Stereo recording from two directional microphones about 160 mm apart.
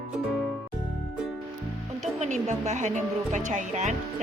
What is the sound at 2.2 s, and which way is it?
Speech, 45° right (ahead or behind).